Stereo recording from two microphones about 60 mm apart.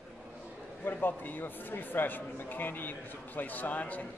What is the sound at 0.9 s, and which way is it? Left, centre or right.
A man's voice, left.